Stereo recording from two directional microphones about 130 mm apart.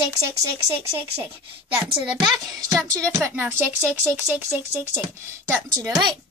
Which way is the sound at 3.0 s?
20° right (ahead or behind).